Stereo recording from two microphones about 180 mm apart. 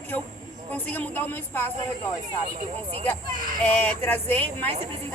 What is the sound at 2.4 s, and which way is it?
Speech, 50° right (ahead or behind).